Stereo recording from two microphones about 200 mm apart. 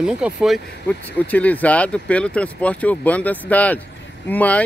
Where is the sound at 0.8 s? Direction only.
5° left (ahead or behind).